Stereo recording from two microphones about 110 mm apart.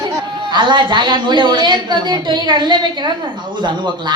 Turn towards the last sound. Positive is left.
turn(degrees=-45)  # may be behind; listen again after turning